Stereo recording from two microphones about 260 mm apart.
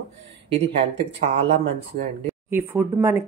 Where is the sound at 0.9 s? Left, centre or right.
Right.